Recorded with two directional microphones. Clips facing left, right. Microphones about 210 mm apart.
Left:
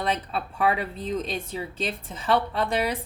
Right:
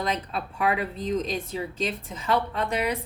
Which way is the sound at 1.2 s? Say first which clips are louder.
Right 1 dB; 30° left (ahead or behind).